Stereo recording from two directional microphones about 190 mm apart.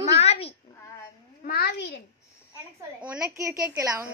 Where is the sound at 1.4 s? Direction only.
55° left (ahead or behind).